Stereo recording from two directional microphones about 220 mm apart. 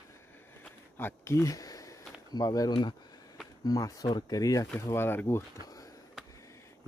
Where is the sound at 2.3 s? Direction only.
15° left (ahead or behind).